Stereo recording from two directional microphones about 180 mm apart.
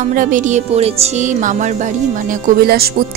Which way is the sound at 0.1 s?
45° right (ahead or behind).